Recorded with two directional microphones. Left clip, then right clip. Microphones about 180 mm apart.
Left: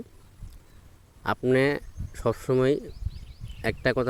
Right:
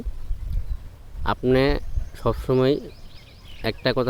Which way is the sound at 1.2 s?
30° left (ahead or behind).